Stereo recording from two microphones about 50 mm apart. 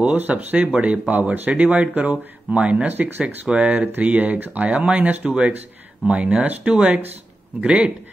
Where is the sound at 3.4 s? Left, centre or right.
Right.